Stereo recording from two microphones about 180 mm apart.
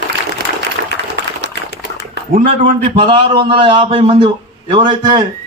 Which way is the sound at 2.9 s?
30° right (ahead or behind).